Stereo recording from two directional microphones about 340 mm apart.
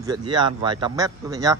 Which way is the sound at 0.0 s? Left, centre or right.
Centre.